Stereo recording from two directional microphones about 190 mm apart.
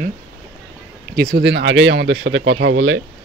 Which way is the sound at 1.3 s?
65° right (ahead or behind).